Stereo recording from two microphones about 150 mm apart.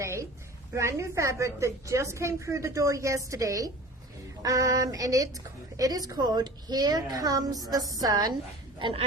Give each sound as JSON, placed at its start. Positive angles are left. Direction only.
{"t": 0.0, "sound": "a sound", "side_deg": -20}
{"t": 0.7, "sound": "a woman's voice", "side_deg": -20}
{"t": 8.8, "sound": "speech", "side_deg": -35}